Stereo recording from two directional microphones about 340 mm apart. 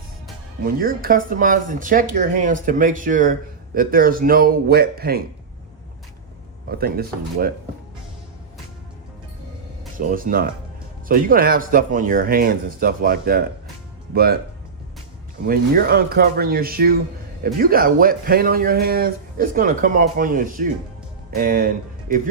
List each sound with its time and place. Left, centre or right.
0.6 s speech: right
6.7 s speech: right
10.1 s speech: right
15.4 s speech: right